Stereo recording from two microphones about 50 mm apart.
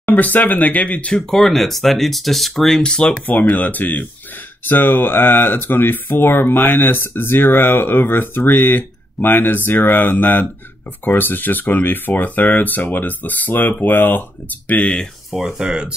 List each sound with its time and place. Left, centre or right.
0.1 s speech: left
1.3 s speech: centre
3.3 s speech: left
15.3 s speech: centre
15.6 s speech: centre